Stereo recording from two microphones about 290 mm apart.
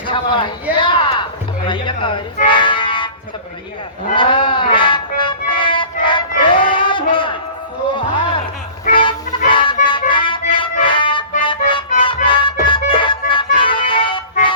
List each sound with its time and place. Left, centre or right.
0.1 s speech: centre
4.1 s a sound: centre
8.8 s music: centre